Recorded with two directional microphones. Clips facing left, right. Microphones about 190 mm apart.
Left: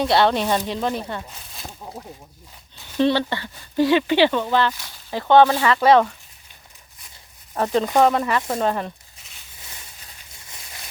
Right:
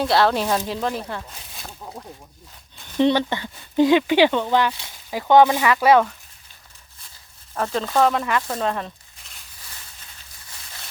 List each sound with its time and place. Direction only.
0.0 s speech: centre (ahead or behind)
1.8 s a sound: 5° left (ahead or behind)
3.0 s speech: 15° right (ahead or behind)
7.5 s speech: 15° left (ahead or behind)
8.0 s speech: 5° left (ahead or behind)
8.5 s a sound: 5° left (ahead or behind)